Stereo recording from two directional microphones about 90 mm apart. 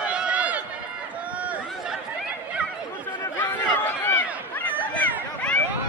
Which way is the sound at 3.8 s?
20° left (ahead or behind).